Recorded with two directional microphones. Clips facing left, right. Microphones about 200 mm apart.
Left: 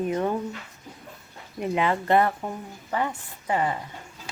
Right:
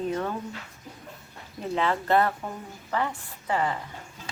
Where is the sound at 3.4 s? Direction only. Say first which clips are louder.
Left 2 dB; 20° left (ahead or behind).